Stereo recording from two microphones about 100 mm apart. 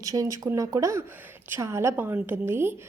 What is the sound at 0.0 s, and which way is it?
A woman's voice, 35° right (ahead or behind).